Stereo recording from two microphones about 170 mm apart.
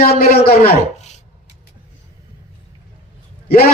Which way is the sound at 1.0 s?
45° left (ahead or behind).